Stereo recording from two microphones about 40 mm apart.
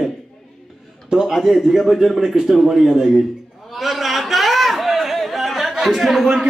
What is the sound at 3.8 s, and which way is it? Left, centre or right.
Chatter, centre.